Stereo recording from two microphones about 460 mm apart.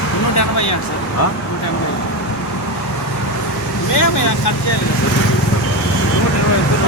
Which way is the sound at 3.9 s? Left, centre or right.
Left.